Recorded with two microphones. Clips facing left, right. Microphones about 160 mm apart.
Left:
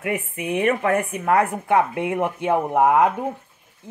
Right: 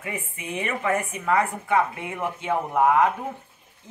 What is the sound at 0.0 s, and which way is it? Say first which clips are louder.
Speech: left 8 dB; 65° left (ahead or behind).